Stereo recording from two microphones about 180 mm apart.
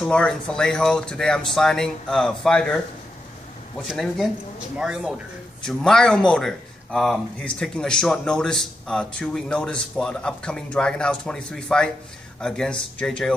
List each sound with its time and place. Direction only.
0.0 s speech: 5° left (ahead or behind)
3.8 s speech: centre (ahead or behind)